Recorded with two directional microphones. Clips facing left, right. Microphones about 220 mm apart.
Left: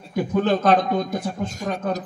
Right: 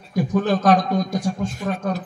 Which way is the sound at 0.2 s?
55° left (ahead or behind).